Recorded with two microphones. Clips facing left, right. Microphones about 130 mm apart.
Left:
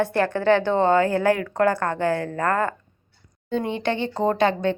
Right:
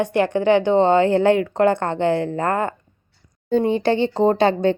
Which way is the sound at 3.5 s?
35° right (ahead or behind).